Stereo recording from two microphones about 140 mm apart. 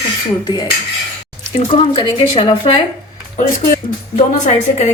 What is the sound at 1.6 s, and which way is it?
Speech, 35° left (ahead or behind).